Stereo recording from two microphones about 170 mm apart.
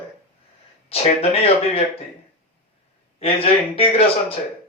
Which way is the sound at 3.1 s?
35° left (ahead or behind).